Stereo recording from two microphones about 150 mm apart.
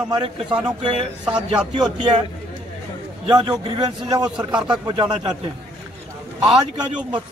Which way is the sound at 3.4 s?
30° right (ahead or behind).